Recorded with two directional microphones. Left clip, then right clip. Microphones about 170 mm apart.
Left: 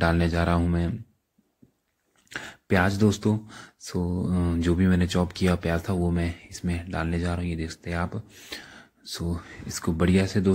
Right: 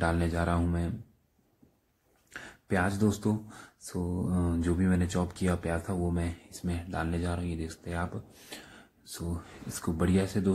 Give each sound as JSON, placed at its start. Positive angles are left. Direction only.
{"t": 0.0, "sound": "speech", "side_deg": 25}
{"t": 2.2, "sound": "a sound", "side_deg": 30}
{"t": 3.1, "sound": "speech", "side_deg": 15}